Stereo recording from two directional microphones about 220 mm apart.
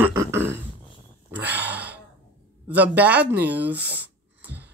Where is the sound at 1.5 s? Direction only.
50° right (ahead or behind).